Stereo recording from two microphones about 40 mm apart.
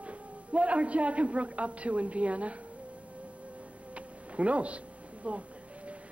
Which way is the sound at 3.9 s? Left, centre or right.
Right.